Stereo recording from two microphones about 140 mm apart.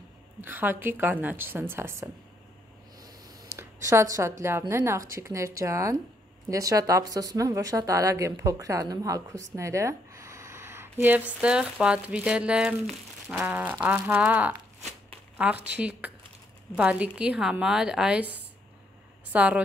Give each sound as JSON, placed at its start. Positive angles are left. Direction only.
{"t": 0.4, "sound": "a woman's voice", "side_deg": -15}
{"t": 3.5, "sound": "a woman's voice", "side_deg": -20}
{"t": 15.7, "sound": "a woman's voice", "side_deg": -10}